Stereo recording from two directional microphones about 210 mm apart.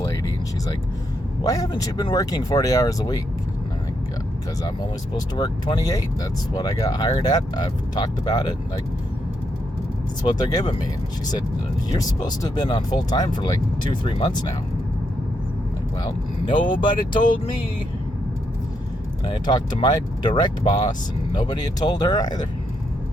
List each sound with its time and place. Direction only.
1.5 s speech: 15° left (ahead or behind)
4.6 s speech: 20° left (ahead or behind)
10.2 s speech: 20° left (ahead or behind)
11.9 s speech: 20° left (ahead or behind)
16.8 s speech: 20° left (ahead or behind)
19.2 s speech: 20° left (ahead or behind)